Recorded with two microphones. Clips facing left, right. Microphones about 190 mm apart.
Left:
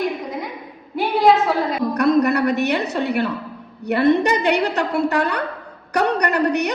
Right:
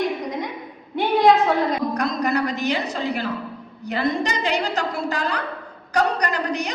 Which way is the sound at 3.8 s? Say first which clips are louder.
Left 7 dB; 65° left (ahead or behind).